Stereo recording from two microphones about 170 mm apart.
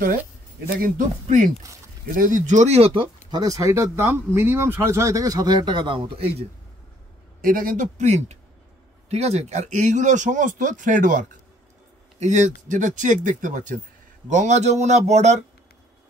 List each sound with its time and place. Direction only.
0.7 s speech: 55° right (ahead or behind); by 6.2 s 30° right (ahead or behind)
7.4 s speech: 55° right (ahead or behind)